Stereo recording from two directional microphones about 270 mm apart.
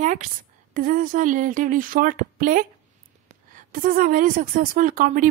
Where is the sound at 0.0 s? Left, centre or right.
Right.